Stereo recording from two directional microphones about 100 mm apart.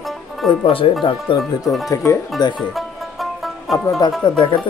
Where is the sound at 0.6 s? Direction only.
65° left (ahead or behind).